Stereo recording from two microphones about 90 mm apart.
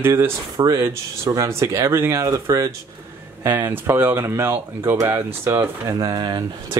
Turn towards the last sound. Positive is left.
turn(degrees=-50)  # may be behind; listen again after turning